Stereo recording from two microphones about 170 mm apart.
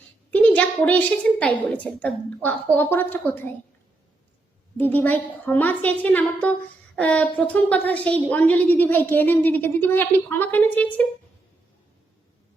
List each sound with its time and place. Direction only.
0.3 s a woman's voice: 10° left (ahead or behind)
4.8 s a woman's voice: 10° left (ahead or behind)